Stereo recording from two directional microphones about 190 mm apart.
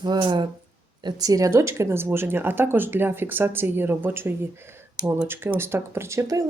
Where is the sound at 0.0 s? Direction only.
25° right (ahead or behind).